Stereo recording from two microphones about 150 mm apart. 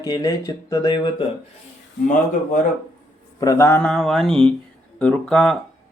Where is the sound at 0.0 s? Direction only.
25° left (ahead or behind).